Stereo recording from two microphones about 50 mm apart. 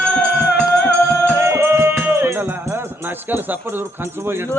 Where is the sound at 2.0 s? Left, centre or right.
Right.